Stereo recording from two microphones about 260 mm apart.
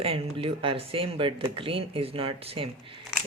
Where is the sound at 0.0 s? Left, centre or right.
Right.